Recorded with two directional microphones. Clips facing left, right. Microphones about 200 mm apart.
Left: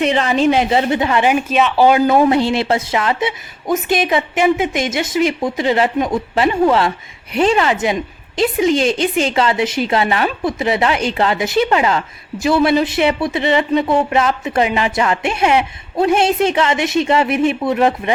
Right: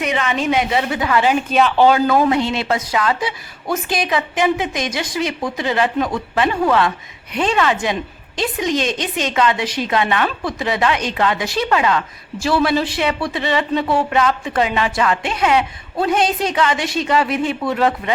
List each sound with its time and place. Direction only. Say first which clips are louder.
0.0 s a woman's voice: left 6 dB; 30° left (ahead or behind); by 1.5 s 15° left (ahead or behind)
1.5 s speech: even; centre (ahead or behind)
2.0 s a woman's voice: left 3 dB; 25° left (ahead or behind)